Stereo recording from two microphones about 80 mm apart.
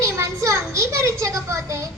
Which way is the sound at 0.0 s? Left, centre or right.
Right.